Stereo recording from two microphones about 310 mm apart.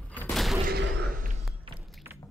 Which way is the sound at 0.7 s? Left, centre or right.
Right.